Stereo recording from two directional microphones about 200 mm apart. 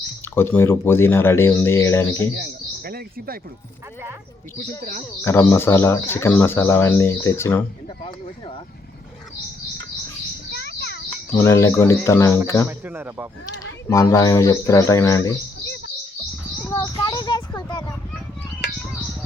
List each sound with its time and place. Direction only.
0.3 s speech: 10° left (ahead or behind)
2.4 s speech: 50° right (ahead or behind)
5.2 s speech: 10° left (ahead or behind)
10.5 s a sound: 50° left (ahead or behind)
11.3 s speech: 15° left (ahead or behind)
12.8 s speech: 10° right (ahead or behind)
13.9 s speech: 15° left (ahead or behind)
16.6 s a sound: 15° left (ahead or behind)